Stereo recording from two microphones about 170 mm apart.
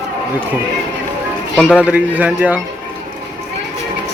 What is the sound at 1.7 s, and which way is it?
Speech, 10° right (ahead or behind).